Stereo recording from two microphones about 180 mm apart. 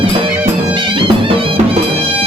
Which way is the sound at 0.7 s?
25° right (ahead or behind).